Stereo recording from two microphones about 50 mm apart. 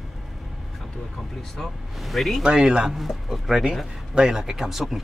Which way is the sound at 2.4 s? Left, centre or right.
Centre.